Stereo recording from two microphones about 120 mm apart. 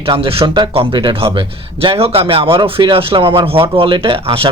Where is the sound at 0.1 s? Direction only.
50° right (ahead or behind).